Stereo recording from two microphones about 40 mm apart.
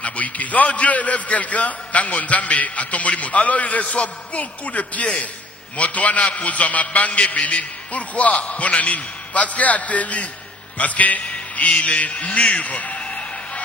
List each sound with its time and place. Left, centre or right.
0.0 s a man's voice: left